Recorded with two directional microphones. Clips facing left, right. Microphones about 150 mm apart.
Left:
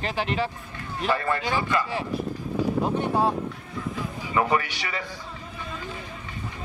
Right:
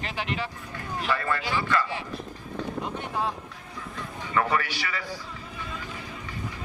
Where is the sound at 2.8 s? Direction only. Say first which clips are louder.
Left 7 dB; 35° left (ahead or behind).